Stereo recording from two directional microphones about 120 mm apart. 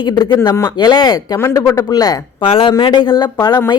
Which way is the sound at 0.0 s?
35° left (ahead or behind).